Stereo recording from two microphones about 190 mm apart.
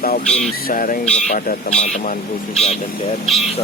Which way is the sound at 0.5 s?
50° left (ahead or behind).